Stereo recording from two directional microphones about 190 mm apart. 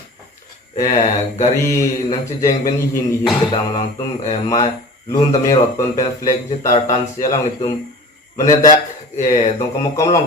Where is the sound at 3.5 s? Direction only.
40° left (ahead or behind).